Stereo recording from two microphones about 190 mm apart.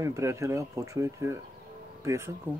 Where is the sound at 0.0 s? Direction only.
15° right (ahead or behind).